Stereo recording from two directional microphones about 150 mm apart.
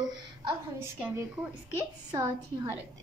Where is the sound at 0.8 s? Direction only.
15° right (ahead or behind).